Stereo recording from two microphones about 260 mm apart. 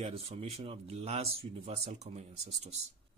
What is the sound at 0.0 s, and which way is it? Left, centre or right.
Speech, right.